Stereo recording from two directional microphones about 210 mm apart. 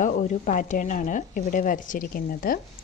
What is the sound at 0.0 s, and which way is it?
A woman's voice, 40° left (ahead or behind).